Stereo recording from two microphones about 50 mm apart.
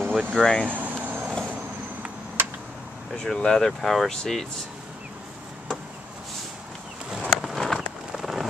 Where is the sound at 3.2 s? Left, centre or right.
Centre.